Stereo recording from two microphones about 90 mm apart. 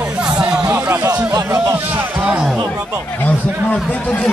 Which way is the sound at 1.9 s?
20° right (ahead or behind).